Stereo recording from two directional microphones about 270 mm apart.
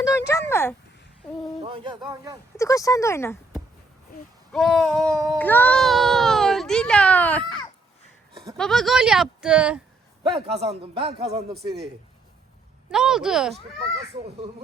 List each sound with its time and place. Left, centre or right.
0.3 s a sound: centre
1.6 s speech: centre
2.6 s speech: centre
4.5 s a child's voice: centre
10.3 s speech: right
11.5 s speech: right
12.9 s speech: centre